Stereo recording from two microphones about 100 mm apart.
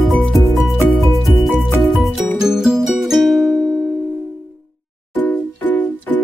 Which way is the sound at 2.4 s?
5° right (ahead or behind).